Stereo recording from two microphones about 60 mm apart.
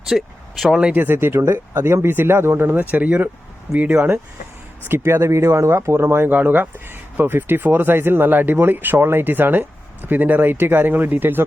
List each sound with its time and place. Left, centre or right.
0.1 s speech: centre
0.9 s speech: right
4.9 s speech: right